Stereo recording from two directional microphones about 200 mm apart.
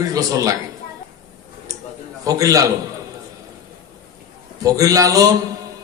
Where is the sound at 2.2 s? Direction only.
15° right (ahead or behind).